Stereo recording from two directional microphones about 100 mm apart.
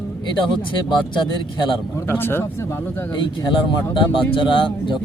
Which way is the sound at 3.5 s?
55° left (ahead or behind).